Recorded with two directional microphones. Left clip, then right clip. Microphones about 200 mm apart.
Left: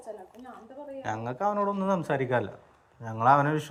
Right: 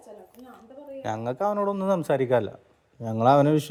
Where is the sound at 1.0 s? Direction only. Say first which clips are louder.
Right 3 dB; 55° right (ahead or behind).